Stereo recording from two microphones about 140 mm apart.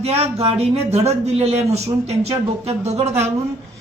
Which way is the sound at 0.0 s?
45° right (ahead or behind).